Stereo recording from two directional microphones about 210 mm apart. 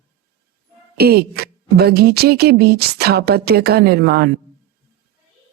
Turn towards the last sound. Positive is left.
turn(degrees=-50)  # may be behind; listen again after turning